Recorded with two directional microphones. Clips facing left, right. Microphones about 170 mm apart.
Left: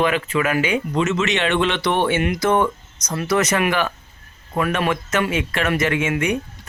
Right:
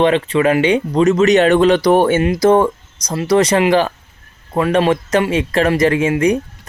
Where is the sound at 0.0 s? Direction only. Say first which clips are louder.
Right 6 dB; 30° right (ahead or behind).